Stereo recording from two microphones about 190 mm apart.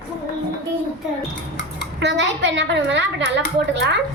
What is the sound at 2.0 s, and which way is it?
A woman's voice, 70° right (ahead or behind).